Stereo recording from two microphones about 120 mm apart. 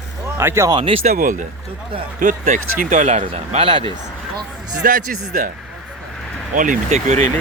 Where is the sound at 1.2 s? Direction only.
90° right.